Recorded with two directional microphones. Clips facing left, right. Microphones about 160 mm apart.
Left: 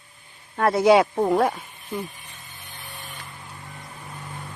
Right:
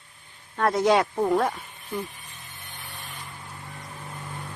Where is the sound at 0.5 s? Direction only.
5° left (ahead or behind).